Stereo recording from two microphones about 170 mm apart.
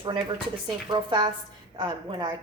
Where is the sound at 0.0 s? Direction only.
25° right (ahead or behind).